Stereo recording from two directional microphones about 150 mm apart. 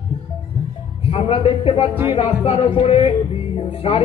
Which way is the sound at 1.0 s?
40° left (ahead or behind).